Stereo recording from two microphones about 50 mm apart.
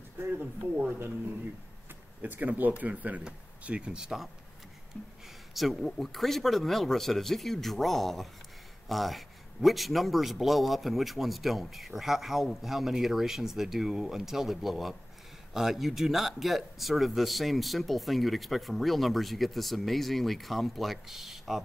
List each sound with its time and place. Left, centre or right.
0.2 s speech: right
2.2 s speech: right
3.9 s speech: centre
4.9 s speech: centre
5.5 s a man's voice: centre